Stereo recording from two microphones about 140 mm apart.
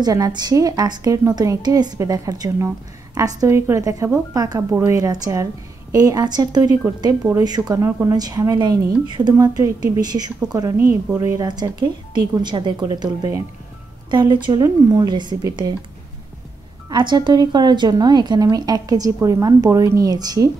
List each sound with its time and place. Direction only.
0.0 s a woman's voice: 25° right (ahead or behind)
14.1 s a woman's voice: 35° right (ahead or behind)
16.9 s a woman's voice: 35° right (ahead or behind)